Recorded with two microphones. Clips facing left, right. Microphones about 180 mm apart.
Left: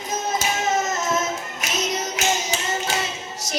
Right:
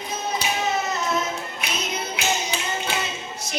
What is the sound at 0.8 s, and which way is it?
Music, 45° left (ahead or behind).